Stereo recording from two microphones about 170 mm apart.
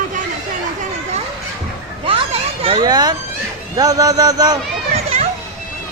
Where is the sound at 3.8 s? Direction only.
20° right (ahead or behind).